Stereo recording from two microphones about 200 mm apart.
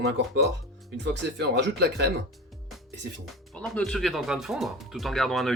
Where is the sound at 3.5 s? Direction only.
5° left (ahead or behind).